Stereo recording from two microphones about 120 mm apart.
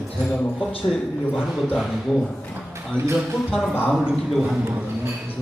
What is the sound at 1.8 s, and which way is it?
Speech, centre (ahead or behind).